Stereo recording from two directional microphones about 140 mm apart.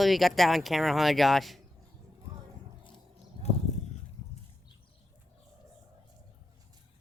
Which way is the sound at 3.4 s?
40° right (ahead or behind).